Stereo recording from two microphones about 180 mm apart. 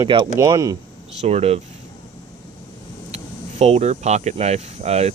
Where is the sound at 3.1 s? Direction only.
40° right (ahead or behind).